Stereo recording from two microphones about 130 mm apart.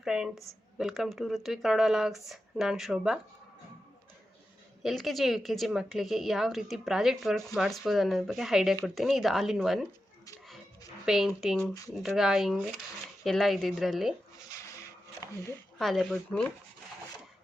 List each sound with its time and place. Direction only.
0.0 s a woman's voice: 5° right (ahead or behind)
4.8 s a woman's voice: centre (ahead or behind)
11.0 s a woman's voice: 5° right (ahead or behind)
14.3 s a sound: 25° left (ahead or behind)
15.8 s a woman's voice: centre (ahead or behind)